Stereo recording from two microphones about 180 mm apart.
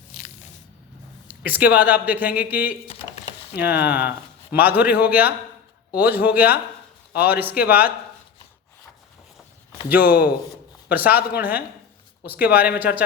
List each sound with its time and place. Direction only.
1.3 s a sound: 10° right (ahead or behind)
1.7 s speech: 10° right (ahead or behind)
3.8 s speech: 10° right (ahead or behind)
10.0 s speech: 60° left (ahead or behind)
10.8 s speech: 10° right (ahead or behind)